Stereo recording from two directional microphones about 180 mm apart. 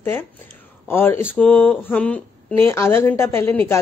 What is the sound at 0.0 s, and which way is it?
A man's voice, 10° left (ahead or behind).